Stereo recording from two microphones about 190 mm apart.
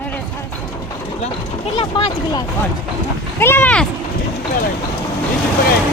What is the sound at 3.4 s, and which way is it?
Speech, 10° left (ahead or behind).